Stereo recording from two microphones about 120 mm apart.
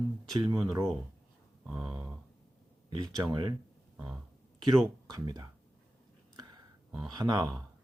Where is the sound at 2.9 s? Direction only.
35° right (ahead or behind).